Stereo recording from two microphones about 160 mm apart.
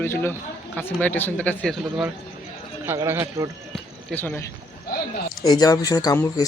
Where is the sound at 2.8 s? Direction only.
15° right (ahead or behind).